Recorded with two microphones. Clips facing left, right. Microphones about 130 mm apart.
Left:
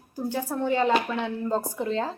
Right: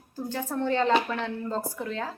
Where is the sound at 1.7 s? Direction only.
25° left (ahead or behind).